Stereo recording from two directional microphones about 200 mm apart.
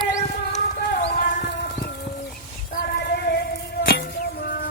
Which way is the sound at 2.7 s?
50° left (ahead or behind).